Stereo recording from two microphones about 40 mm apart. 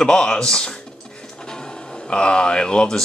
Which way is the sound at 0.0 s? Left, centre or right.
Centre.